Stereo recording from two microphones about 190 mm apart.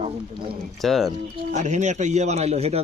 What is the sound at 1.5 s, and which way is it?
Speech, 40° right (ahead or behind).